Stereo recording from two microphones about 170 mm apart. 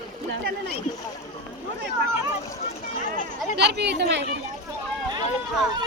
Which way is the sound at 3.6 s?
75° right (ahead or behind).